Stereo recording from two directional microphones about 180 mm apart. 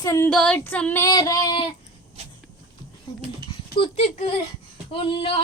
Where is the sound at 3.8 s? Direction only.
35° left (ahead or behind).